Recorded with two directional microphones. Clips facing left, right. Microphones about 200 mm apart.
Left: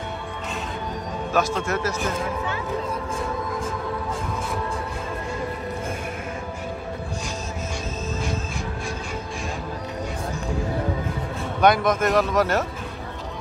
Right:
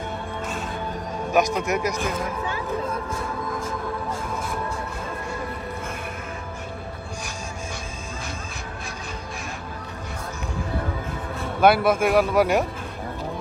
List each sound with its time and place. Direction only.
1.3 s a man's voice: 15° right (ahead or behind)
11.6 s a man's voice: 5° right (ahead or behind)